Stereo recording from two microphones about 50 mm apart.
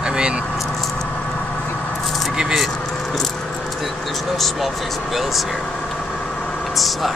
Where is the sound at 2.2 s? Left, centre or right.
Centre.